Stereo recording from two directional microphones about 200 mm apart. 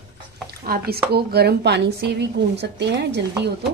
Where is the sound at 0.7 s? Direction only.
50° right (ahead or behind).